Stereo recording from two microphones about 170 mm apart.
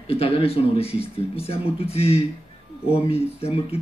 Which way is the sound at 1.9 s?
35° left (ahead or behind).